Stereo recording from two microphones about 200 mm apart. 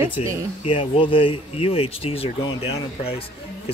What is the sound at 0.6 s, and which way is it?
Speech, 25° left (ahead or behind).